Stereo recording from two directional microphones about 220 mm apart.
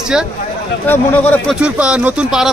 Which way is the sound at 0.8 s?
10° left (ahead or behind).